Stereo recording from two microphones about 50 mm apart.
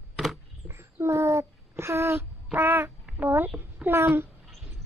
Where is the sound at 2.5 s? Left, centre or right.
Right.